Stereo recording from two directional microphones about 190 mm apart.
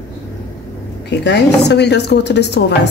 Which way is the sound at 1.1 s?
60° left (ahead or behind).